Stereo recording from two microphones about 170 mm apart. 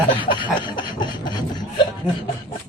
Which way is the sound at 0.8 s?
25° left (ahead or behind).